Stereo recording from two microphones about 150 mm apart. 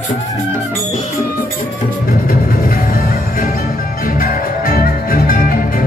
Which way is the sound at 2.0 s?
90° left.